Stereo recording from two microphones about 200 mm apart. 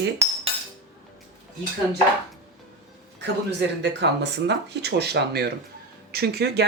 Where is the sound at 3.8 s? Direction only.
60° right (ahead or behind).